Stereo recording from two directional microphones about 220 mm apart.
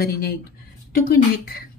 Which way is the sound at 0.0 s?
45° left (ahead or behind).